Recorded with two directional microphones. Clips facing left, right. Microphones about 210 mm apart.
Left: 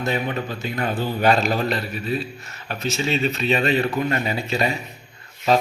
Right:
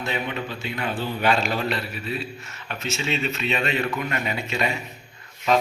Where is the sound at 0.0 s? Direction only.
40° left (ahead or behind).